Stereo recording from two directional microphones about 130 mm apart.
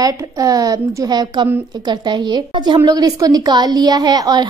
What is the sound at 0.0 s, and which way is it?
A woman's voice, 30° right (ahead or behind).